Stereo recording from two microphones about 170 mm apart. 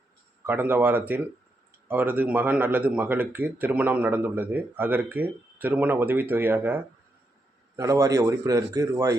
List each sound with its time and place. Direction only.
0.4 s a man's voice: 10° right (ahead or behind)